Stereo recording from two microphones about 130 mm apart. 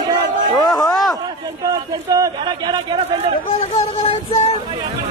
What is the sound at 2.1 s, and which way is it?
Speech, 30° right (ahead or behind).